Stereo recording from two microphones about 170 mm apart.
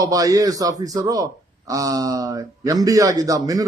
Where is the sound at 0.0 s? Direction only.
20° right (ahead or behind).